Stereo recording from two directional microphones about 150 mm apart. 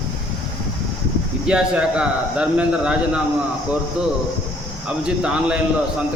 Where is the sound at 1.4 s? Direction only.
5° right (ahead or behind).